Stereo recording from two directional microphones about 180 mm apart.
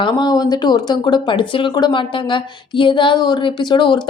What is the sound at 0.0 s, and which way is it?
Speech, 25° left (ahead or behind).